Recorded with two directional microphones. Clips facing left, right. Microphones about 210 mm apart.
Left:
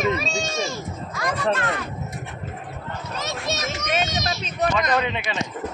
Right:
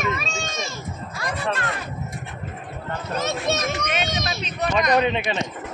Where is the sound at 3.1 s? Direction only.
55° right (ahead or behind).